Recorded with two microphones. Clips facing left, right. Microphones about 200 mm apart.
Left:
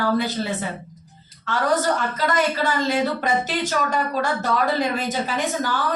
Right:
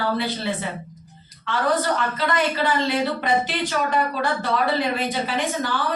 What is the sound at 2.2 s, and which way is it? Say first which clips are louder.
A woman's voice: left 1 dB; 45° left (ahead or behind).